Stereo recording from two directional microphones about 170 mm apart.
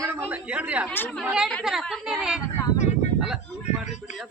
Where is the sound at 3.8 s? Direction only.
45° left (ahead or behind).